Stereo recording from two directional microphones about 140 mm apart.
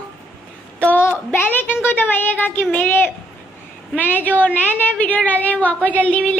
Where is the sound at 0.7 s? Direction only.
10° left (ahead or behind).